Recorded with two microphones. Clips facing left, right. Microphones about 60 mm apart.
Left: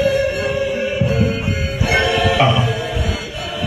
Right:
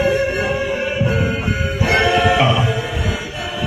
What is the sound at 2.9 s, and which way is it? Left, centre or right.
Chant, right.